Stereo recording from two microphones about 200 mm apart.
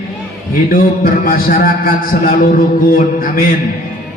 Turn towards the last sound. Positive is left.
turn(degrees=45)  # may be behind; listen again after turning